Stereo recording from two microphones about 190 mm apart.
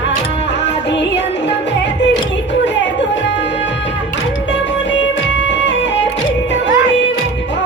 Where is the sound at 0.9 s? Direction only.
65° left (ahead or behind).